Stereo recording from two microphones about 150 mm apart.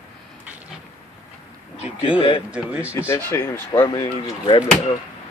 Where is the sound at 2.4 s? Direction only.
10° right (ahead or behind).